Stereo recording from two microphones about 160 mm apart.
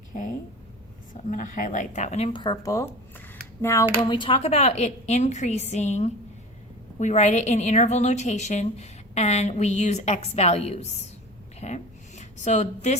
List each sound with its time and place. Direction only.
0.1 s a woman's voice: 55° left (ahead or behind); by 2.9 s 20° left (ahead or behind)
3.6 s a sound: 15° left (ahead or behind)
4.0 s a woman's voice: 30° left (ahead or behind)